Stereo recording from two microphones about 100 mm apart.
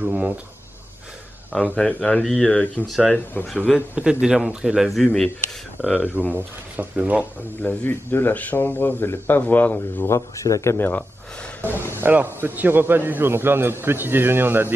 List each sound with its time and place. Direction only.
0.0 s a sound: 15° right (ahead or behind)
1.5 s speech: 10° left (ahead or behind)
3.9 s speech: 10° right (ahead or behind)
5.9 s speech: 15° right (ahead or behind)
7.6 s speech: 20° left (ahead or behind)
10.0 s speech: 30° left (ahead or behind)
12.0 s a man's voice: 20° right (ahead or behind)